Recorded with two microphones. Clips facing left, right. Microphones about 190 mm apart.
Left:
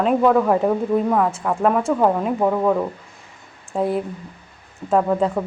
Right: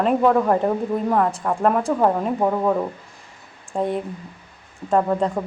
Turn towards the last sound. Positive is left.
turn(degrees=0)  # may be behind; listen again after turning